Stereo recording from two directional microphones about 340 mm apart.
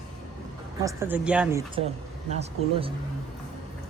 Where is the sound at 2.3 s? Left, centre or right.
Centre.